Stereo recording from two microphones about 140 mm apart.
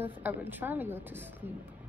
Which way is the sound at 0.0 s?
15° right (ahead or behind).